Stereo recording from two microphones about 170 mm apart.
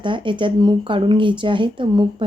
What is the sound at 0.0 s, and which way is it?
Speech, 30° right (ahead or behind).